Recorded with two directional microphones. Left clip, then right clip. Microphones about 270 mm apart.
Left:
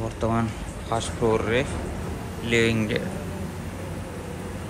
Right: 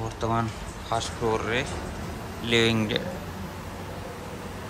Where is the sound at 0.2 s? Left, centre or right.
Centre.